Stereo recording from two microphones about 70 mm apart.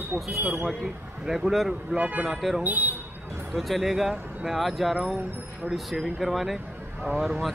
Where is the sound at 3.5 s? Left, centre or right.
Centre.